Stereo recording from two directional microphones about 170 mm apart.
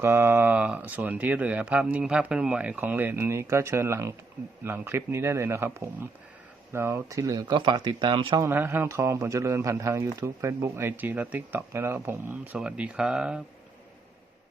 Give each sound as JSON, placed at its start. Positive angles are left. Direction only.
{"t": 0.0, "sound": "a man's voice", "side_deg": -15}
{"t": 8.4, "sound": "a man's voice", "side_deg": -10}